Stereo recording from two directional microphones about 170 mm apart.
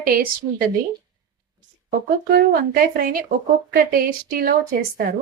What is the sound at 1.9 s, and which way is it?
Speech, 65° right (ahead or behind).